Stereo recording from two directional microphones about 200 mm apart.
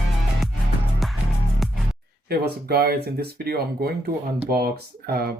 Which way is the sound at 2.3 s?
50° right (ahead or behind).